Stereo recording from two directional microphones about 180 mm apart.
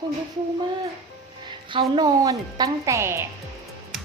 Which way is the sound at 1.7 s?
20° right (ahead or behind).